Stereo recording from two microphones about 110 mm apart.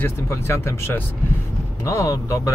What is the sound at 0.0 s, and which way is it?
A man's voice, 25° left (ahead or behind).